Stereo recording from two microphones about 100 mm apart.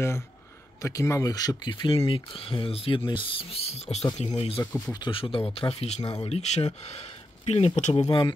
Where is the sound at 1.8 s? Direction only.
65° left (ahead or behind); by 4.0 s 90° left.